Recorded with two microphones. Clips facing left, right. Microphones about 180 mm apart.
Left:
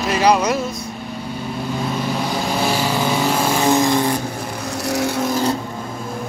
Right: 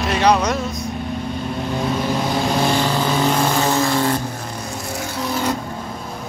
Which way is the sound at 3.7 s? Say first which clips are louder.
Left 2 dB; 15° left (ahead or behind).